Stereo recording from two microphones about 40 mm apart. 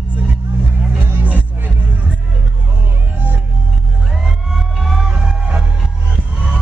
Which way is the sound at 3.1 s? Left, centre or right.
Right.